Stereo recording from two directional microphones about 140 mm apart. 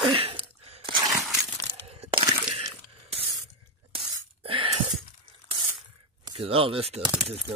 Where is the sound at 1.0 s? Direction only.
Centre (ahead or behind).